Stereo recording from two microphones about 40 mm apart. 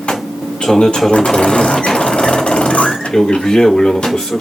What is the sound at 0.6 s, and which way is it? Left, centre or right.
Speech, centre.